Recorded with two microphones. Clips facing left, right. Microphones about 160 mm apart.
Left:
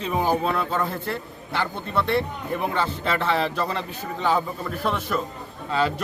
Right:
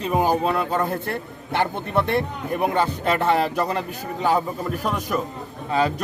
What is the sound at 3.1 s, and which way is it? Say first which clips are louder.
Speech: right 3 dB; 45° right (ahead or behind).